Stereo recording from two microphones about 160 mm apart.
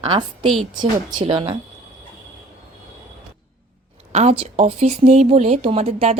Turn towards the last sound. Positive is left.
turn(degrees=-40)  # may be behind; listen again after turning